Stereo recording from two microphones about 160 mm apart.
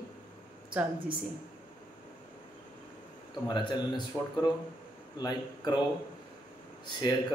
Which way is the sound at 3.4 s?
30° left (ahead or behind).